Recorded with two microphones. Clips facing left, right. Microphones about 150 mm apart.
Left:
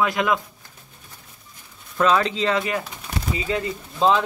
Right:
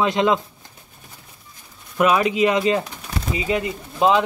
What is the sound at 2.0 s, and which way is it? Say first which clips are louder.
Speech: right 3 dB; 15° right (ahead or behind).